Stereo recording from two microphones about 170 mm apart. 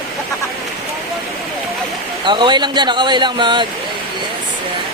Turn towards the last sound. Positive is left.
turn(degrees=-25)  # may be behind; listen again after turning